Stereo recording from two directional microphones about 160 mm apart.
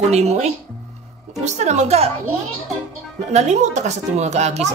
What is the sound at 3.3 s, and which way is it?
Speech, 45° right (ahead or behind).